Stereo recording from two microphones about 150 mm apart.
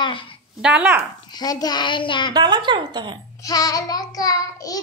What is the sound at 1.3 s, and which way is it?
Child singing, 25° left (ahead or behind).